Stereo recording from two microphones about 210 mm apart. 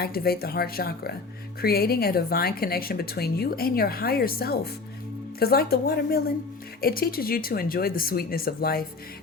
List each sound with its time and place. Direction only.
0.0 s a woman's voice: 45° left (ahead or behind)